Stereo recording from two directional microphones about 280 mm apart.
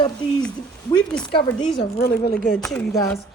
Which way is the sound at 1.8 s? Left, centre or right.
Left.